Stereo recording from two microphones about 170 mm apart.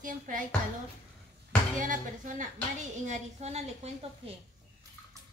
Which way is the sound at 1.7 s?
50° right (ahead or behind).